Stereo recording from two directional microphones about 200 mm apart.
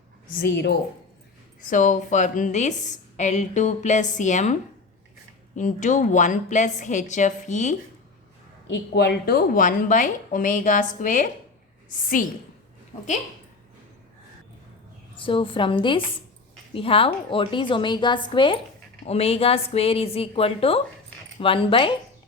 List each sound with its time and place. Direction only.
0.3 s a woman's voice: 55° left (ahead or behind)
1.7 s a woman's voice: 40° left (ahead or behind)
5.5 s a woman's voice: 40° left (ahead or behind)
8.6 s a woman's voice: 60° left (ahead or behind); by 11.3 s 40° left (ahead or behind)
15.1 s a woman's voice: 25° left (ahead or behind)